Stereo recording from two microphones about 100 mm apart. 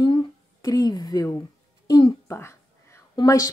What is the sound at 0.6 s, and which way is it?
Speech, 40° left (ahead or behind).